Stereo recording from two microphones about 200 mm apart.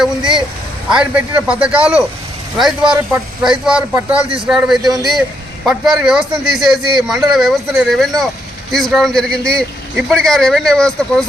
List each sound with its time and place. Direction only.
0.0 s speech: 5° right (ahead or behind)